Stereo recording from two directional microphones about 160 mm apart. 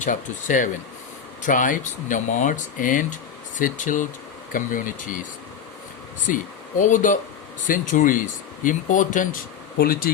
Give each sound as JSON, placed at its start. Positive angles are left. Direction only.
{"t": 0.0, "sound": "speech", "side_deg": 55}
{"t": 6.2, "sound": "speech", "side_deg": 55}
{"t": 9.7, "sound": "speech", "side_deg": 70}